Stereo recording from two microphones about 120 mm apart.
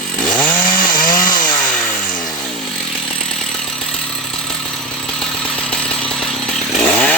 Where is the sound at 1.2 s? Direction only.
90° left.